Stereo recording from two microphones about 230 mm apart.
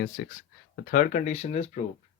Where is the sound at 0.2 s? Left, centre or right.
Left.